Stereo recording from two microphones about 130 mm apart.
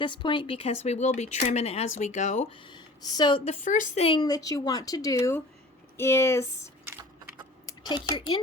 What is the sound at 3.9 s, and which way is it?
Speech, 45° left (ahead or behind).